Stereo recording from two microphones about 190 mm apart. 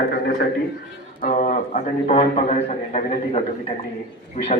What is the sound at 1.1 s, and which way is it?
A man's voice, 45° left (ahead or behind).